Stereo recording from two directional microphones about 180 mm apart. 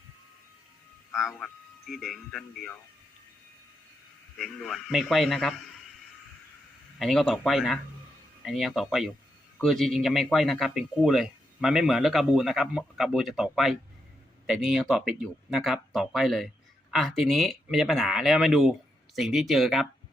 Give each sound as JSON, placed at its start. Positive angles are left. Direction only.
{"t": 1.1, "sound": "speech", "side_deg": 0}
{"t": 4.4, "sound": "speech", "side_deg": 0}
{"t": 7.0, "sound": "speech", "side_deg": 0}